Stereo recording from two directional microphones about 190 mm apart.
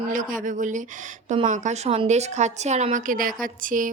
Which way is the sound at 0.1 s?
45° right (ahead or behind).